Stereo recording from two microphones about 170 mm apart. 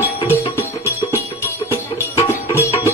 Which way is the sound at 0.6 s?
15° left (ahead or behind).